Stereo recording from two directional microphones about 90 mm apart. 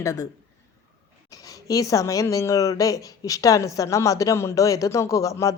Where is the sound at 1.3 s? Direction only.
40° left (ahead or behind).